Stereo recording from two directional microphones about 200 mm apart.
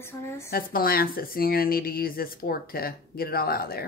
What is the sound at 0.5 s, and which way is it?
Speech, 45° left (ahead or behind).